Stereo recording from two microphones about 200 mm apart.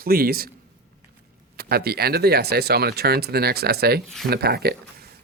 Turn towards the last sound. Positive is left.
turn(degrees=-50)  # may be behind; listen again after turning